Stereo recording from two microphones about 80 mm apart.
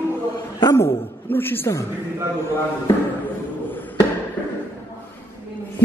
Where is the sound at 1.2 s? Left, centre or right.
Left.